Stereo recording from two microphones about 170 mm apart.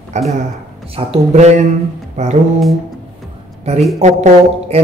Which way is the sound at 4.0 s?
40° right (ahead or behind).